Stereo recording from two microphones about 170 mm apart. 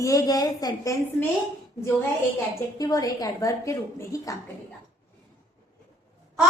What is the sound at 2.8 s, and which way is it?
A woman's voice, 20° left (ahead or behind).